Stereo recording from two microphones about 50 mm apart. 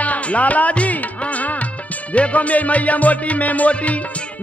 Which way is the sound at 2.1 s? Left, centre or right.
Left.